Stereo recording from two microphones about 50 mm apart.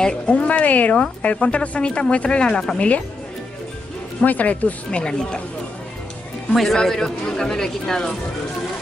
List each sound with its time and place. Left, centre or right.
0.0 s speech: centre
4.2 s speech: left
6.5 s speech: centre